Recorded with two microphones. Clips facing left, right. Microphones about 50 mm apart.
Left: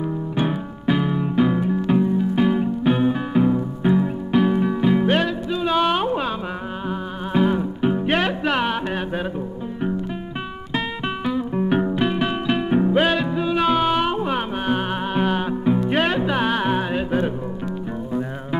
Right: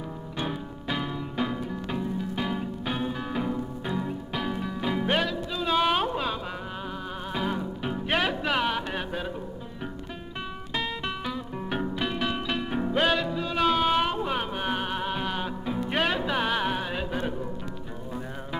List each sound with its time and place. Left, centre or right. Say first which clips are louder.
0.4 s music: left 7 dB; centre
7.3 s music: left 11 dB; centre
8.1 s music: left 5 dB; centre
11.2 s music: left 11 dB; centre
15.9 s music: left 6 dB; centre